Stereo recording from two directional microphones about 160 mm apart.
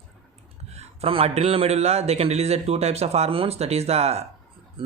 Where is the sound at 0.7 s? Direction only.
40° right (ahead or behind).